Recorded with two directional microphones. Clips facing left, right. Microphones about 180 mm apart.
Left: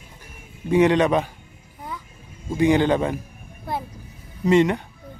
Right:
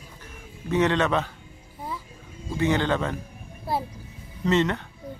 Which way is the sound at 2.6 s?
15° left (ahead or behind).